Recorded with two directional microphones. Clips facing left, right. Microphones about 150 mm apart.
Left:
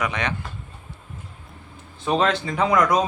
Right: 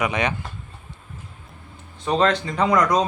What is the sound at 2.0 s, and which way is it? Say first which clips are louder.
Speech: right 1 dB; 10° left (ahead or behind).